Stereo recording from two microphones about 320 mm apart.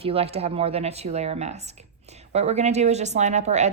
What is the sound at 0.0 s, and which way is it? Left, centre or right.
Speech, centre.